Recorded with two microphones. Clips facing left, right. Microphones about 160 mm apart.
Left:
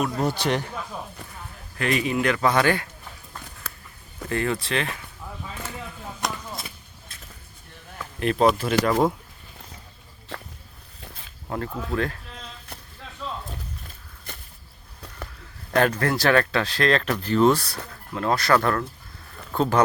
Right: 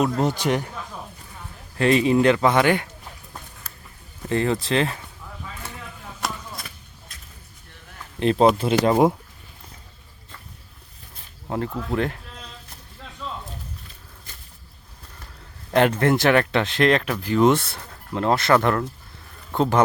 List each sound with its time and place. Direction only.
0.0 s a man's voice: 20° right (ahead or behind)
1.8 s speech: 30° right (ahead or behind)
4.3 s speech: 25° right (ahead or behind)
8.2 s speech: 30° right (ahead or behind)
10.3 s a sound: 85° left
11.4 s speech: 20° right (ahead or behind)
15.7 s speech: 20° right (ahead or behind)
17.5 s a man's voice: 25° right (ahead or behind)